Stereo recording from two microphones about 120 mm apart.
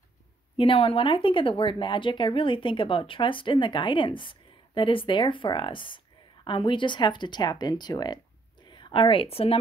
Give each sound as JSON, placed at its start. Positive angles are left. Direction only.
{"t": 0.6, "sound": "a woman's voice", "side_deg": 50}